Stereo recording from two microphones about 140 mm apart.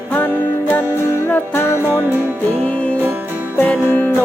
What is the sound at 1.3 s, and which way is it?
Music, 20° left (ahead or behind).